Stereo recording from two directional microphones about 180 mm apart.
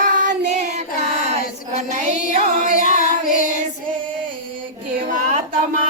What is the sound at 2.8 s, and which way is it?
Child singing, 50° left (ahead or behind).